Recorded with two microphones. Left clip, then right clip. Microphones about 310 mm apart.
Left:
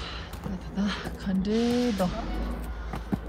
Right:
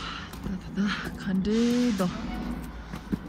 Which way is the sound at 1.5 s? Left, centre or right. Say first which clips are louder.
Even; centre.